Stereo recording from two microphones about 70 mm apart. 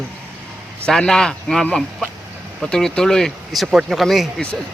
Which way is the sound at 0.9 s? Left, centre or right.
Centre.